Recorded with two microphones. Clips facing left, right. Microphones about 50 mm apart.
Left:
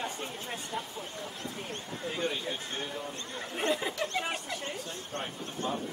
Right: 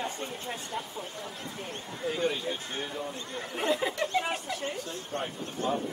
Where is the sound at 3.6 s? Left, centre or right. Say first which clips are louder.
Right 2 dB; centre.